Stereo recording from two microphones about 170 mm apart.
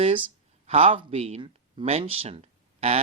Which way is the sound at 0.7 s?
35° right (ahead or behind).